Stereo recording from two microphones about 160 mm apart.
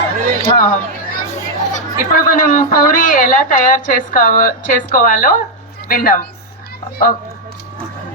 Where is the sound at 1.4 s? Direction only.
50° left (ahead or behind).